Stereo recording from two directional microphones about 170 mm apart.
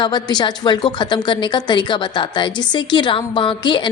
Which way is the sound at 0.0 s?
25° left (ahead or behind).